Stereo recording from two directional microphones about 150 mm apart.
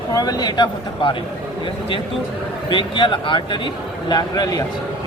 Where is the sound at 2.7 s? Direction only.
30° left (ahead or behind).